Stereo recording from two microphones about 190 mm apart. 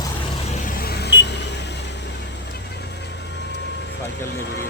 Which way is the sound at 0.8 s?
55° left (ahead or behind).